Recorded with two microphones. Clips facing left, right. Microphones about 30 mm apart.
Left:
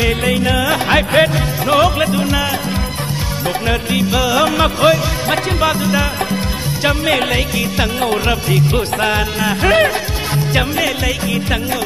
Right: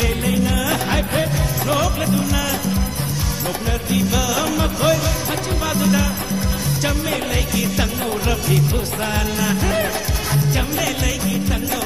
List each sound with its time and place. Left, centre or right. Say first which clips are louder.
0.2 s music: left 4 dB; left
0.6 s music: left 5 dB; left
0.9 s music: left 8 dB; left
3.9 s music: left 3 dB; left
5.8 s music: left 2 dB; left
8.3 s music: left 4 dB; left
8.6 s music: left 7 dB; left
9.6 s music: left 8 dB; left
10.3 s music: left 5 dB; left